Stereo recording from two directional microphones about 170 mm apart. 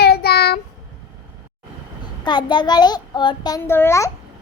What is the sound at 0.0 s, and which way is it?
Child singing, 65° left (ahead or behind).